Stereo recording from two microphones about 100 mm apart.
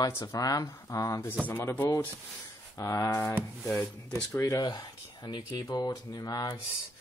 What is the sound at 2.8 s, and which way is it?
Speech, 30° left (ahead or behind).